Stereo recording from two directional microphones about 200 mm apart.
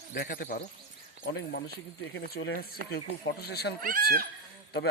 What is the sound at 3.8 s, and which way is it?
Speech, 45° right (ahead or behind).